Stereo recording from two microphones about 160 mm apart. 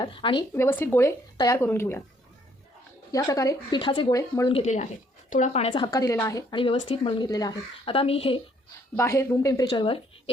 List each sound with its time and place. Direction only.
0.0 s a woman's voice: 30° left (ahead or behind)
0.5 s speech: 15° left (ahead or behind)
3.1 s speech: 20° left (ahead or behind)
4.4 s speech: 40° left (ahead or behind); by 6.6 s 20° left (ahead or behind)
6.6 s a woman's voice: 35° left (ahead or behind)
7.3 s speech: 25° left (ahead or behind)
7.9 s a woman's voice: 35° left (ahead or behind)
9.0 s speech: 15° left (ahead or behind)